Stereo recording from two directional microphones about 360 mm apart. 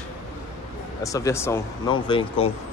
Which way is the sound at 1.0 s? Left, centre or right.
Centre.